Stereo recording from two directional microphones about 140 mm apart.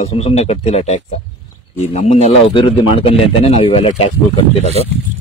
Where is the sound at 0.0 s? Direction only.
50° left (ahead or behind).